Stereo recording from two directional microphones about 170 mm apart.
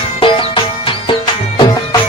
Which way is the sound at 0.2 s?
30° left (ahead or behind).